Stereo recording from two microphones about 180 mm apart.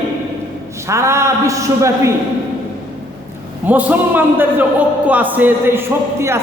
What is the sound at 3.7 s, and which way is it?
A man's voice, 10° right (ahead or behind).